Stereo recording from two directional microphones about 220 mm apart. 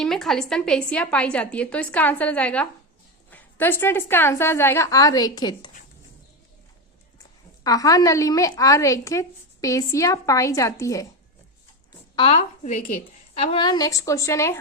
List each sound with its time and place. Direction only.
0.0 s a woman's voice: centre (ahead or behind); by 5.7 s 20° left (ahead or behind)
7.6 s a woman's voice: 15° left (ahead or behind)
12.1 s a woman's voice: 25° left (ahead or behind)